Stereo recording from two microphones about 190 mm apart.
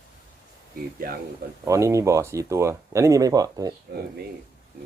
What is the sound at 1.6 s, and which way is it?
Speech, 15° right (ahead or behind).